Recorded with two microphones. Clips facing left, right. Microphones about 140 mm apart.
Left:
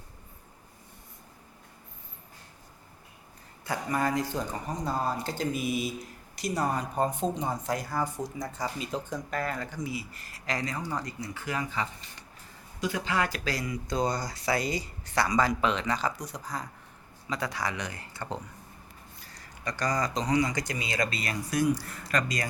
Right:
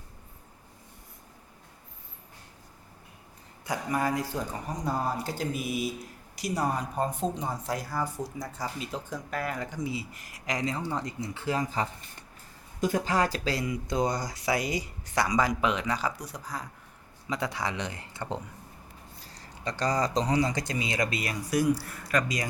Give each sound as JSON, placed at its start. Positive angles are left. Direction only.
{"t": 3.7, "sound": "speech", "side_deg": -10}
{"t": 17.2, "sound": "speech", "side_deg": -20}